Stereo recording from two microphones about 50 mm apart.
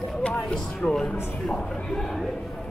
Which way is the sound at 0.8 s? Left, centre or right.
Centre.